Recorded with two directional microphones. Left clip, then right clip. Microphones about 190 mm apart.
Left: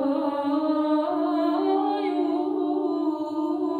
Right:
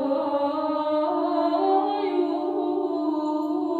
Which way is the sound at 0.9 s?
45° left (ahead or behind).